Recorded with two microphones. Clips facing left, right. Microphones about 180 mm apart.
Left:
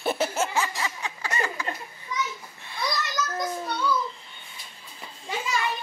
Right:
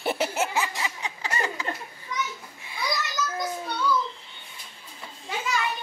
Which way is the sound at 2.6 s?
10° right (ahead or behind).